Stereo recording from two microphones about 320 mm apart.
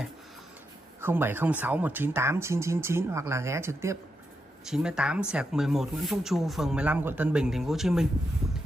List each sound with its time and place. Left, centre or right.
1.0 s speech: centre